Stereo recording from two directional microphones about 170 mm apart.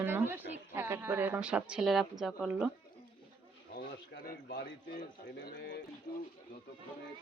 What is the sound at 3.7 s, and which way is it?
A man's voice, 65° left (ahead or behind).